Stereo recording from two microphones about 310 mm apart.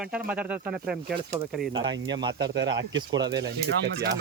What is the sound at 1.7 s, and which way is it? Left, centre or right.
Speech, centre.